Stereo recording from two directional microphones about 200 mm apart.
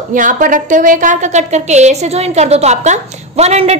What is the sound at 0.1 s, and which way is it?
A woman's voice, 40° right (ahead or behind).